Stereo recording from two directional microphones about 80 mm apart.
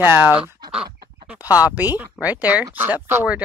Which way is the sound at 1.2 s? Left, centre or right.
Centre.